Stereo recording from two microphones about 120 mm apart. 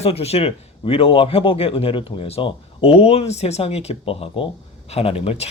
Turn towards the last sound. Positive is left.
turn(degrees=55)  # may be behind; listen again after turning